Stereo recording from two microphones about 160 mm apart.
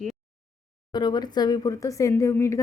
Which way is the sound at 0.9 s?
25° left (ahead or behind).